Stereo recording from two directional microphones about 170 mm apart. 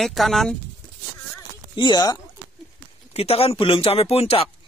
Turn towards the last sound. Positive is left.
turn(degrees=35)  # may be behind; listen again after turning